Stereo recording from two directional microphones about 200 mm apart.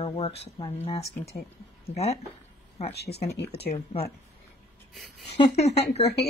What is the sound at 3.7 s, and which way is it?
Speech, 30° left (ahead or behind).